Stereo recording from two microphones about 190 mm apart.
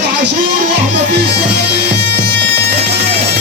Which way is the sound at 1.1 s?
60° right (ahead or behind).